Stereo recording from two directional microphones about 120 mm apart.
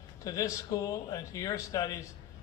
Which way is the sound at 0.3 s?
30° left (ahead or behind).